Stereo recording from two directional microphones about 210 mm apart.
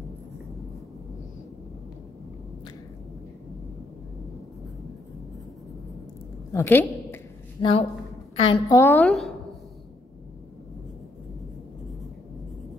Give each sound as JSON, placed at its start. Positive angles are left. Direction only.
{"t": 6.5, "sound": "a woman's voice", "side_deg": 10}
{"t": 7.6, "sound": "a woman's voice", "side_deg": 25}